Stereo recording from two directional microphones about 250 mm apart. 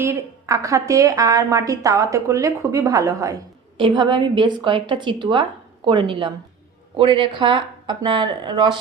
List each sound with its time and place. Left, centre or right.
0.0 s a woman's voice: centre